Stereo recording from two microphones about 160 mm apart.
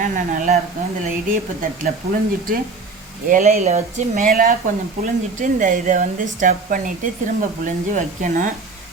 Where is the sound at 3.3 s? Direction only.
45° right (ahead or behind).